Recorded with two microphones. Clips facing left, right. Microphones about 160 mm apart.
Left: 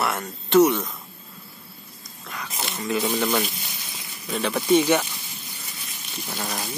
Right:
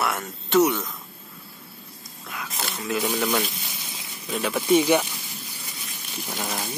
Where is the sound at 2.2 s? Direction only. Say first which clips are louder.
Even; centre (ahead or behind).